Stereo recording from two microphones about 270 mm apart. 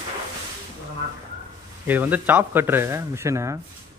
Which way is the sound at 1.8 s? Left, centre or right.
Centre.